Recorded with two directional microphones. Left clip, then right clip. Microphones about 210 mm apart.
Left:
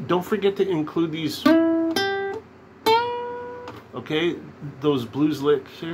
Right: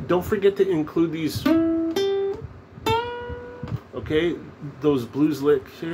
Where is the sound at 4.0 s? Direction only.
10° left (ahead or behind).